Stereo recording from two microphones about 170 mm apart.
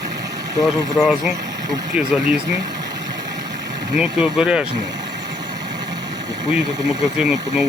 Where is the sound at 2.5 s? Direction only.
25° right (ahead or behind).